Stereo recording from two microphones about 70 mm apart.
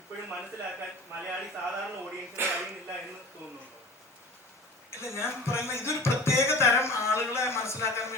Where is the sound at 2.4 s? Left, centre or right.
Right.